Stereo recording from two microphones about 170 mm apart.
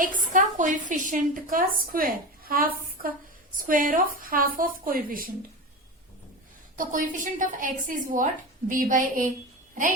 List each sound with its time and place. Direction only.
0.2 s a woman's voice: 50° right (ahead or behind)
6.7 s a woman's voice: 50° right (ahead or behind)